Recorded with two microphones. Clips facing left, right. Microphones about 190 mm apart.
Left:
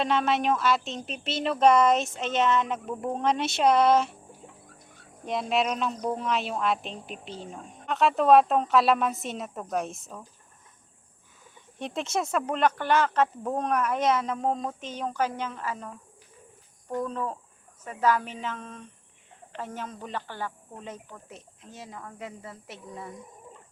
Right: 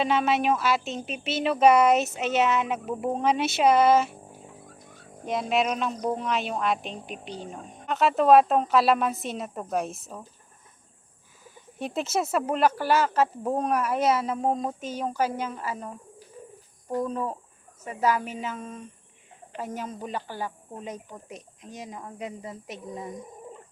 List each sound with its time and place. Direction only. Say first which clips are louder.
0.0 s speech: right 1 dB; 5° right (ahead or behind)
5.2 s speech: right 1 dB; centre (ahead or behind)
11.8 s speech: right 2 dB; 5° right (ahead or behind)
16.9 s speech: right 2 dB; 10° right (ahead or behind)